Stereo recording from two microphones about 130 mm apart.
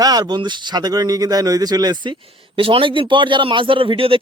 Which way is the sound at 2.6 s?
45° right (ahead or behind).